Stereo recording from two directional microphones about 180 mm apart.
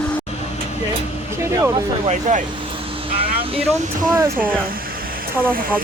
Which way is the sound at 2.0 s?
40° right (ahead or behind).